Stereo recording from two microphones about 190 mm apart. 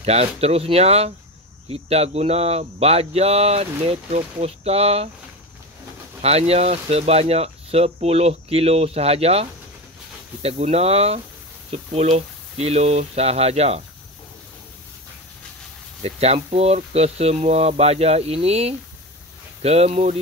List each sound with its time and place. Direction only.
0.0 s speech: 35° right (ahead or behind)
6.2 s speech: 35° right (ahead or behind)
16.0 s speech: 30° right (ahead or behind)